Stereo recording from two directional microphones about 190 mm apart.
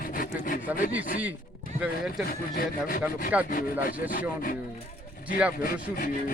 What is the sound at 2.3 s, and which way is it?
Rub, 50° left (ahead or behind).